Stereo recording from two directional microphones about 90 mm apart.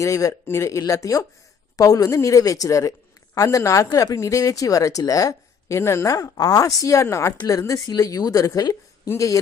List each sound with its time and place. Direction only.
0.0 s speech: 40° left (ahead or behind)
7.3 s speech: 45° left (ahead or behind)